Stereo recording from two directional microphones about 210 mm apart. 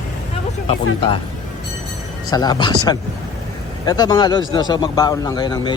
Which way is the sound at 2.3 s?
20° left (ahead or behind).